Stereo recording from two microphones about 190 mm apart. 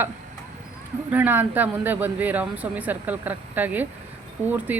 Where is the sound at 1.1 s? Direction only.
10° right (ahead or behind).